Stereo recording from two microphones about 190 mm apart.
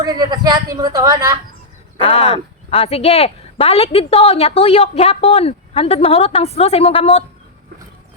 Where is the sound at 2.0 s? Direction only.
30° left (ahead or behind).